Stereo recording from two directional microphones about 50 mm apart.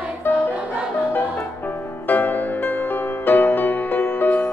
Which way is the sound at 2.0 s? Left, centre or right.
Left.